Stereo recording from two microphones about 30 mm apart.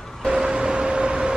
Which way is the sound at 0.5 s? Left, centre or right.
Right.